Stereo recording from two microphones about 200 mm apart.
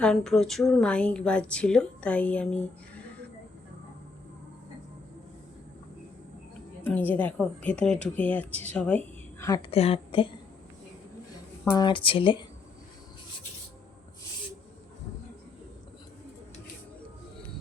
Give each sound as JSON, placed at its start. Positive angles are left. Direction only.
{"t": 0.0, "sound": "a woman's voice", "side_deg": 0}
{"t": 6.8, "sound": "speech", "side_deg": 10}
{"t": 9.6, "sound": "a woman's voice", "side_deg": 30}
{"t": 11.6, "sound": "speech", "side_deg": 15}
{"t": 11.9, "sound": "a woman's voice", "side_deg": 25}